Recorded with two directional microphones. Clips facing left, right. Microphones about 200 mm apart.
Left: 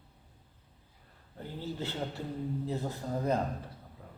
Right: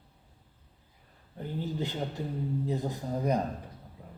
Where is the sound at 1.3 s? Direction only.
15° right (ahead or behind).